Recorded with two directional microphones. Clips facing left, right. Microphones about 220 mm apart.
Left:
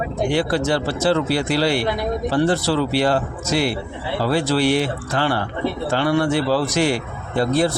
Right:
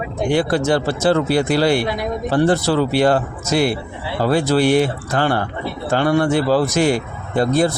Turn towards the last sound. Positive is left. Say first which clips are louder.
# right 2 dB
turn(degrees=-45)  # may be behind; listen again after turning